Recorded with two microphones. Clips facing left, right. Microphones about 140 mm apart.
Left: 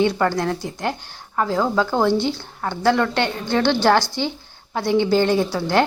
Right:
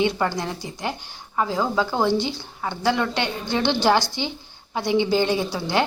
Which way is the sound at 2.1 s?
50° left (ahead or behind).